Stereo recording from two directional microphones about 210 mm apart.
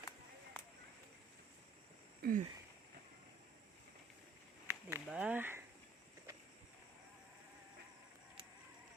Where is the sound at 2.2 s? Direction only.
40° right (ahead or behind).